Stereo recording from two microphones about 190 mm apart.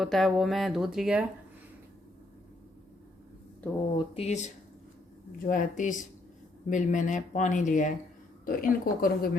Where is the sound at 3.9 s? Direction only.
30° left (ahead or behind).